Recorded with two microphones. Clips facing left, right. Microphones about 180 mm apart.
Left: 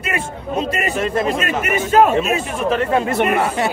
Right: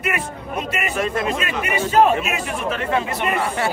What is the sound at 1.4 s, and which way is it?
Speech, 45° left (ahead or behind).